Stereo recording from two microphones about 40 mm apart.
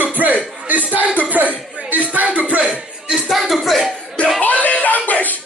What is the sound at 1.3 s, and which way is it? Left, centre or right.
Music, right.